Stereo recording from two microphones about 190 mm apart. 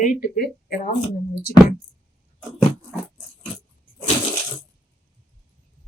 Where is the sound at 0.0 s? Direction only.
45° left (ahead or behind).